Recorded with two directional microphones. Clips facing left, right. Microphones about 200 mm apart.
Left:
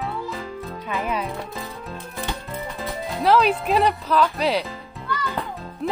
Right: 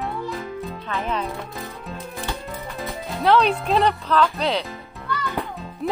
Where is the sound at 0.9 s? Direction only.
10° left (ahead or behind).